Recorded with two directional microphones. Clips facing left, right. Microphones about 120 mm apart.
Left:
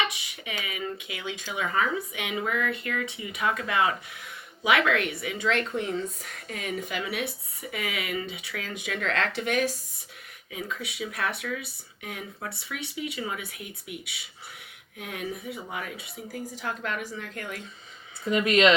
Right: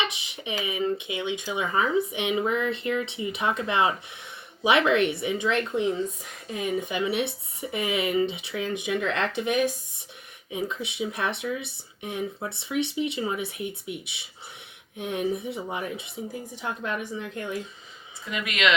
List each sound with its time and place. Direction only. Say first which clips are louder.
0.0 s speech: even; 25° right (ahead or behind)
18.3 s speech: left 6 dB; 35° left (ahead or behind)